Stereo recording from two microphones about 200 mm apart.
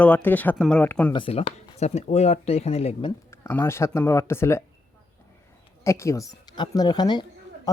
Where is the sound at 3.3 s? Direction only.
10° left (ahead or behind).